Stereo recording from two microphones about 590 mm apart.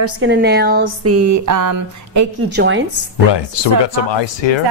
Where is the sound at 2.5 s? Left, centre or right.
Centre.